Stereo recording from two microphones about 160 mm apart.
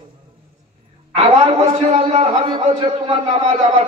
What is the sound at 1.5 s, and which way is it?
A man's voice, 40° right (ahead or behind).